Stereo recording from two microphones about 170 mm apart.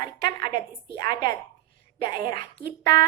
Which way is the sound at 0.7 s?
30° left (ahead or behind).